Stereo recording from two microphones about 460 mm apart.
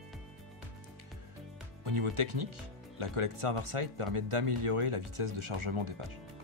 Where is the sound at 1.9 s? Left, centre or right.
Right.